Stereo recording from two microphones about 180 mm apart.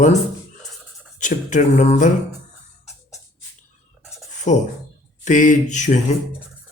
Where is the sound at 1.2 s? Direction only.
45° left (ahead or behind).